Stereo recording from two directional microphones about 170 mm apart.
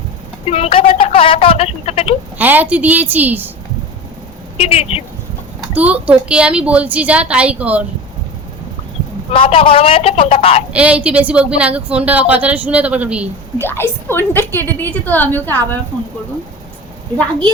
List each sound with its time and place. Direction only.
0.5 s speech: 35° left (ahead or behind)
2.4 s a woman's voice: 10° right (ahead or behind)
4.5 s a woman's voice: 35° left (ahead or behind)
5.7 s a woman's voice: 10° right (ahead or behind)
9.3 s a woman's voice: 30° left (ahead or behind)
10.7 s a woman's voice: 5° right (ahead or behind)
13.6 s a woman's voice: 15° left (ahead or behind)